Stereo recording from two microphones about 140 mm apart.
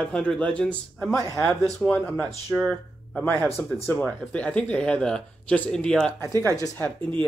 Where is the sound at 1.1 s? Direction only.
20° left (ahead or behind).